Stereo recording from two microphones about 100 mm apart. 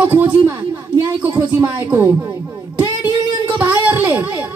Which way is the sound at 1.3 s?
25° right (ahead or behind).